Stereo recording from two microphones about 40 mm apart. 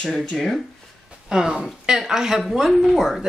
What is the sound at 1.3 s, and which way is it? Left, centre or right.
Speech, centre.